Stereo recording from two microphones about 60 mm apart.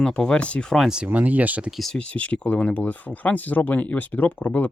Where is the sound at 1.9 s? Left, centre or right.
Left.